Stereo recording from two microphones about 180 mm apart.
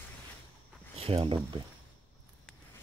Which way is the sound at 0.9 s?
35° right (ahead or behind).